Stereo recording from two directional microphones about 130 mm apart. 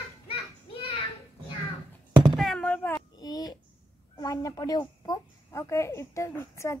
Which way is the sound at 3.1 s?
30° left (ahead or behind).